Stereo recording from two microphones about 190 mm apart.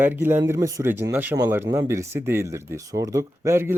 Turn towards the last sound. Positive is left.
turn(degrees=-15)  # may be behind; listen again after turning